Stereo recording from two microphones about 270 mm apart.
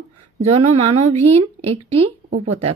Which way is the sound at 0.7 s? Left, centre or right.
Right.